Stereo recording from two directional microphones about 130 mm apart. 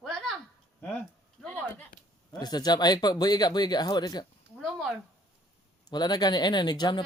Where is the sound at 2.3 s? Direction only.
30° left (ahead or behind).